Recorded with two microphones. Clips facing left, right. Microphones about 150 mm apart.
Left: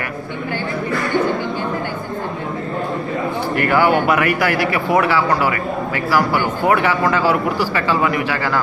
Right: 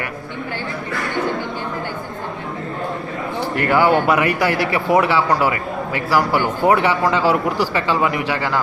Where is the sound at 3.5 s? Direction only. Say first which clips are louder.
Even; 25° right (ahead or behind).